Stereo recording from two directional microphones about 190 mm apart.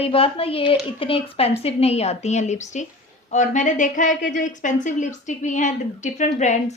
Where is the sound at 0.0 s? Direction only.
30° left (ahead or behind).